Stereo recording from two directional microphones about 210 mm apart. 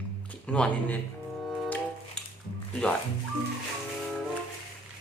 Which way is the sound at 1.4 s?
Centre (ahead or behind).